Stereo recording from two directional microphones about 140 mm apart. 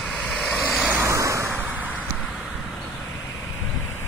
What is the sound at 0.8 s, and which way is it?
Vehicle, 15° right (ahead or behind).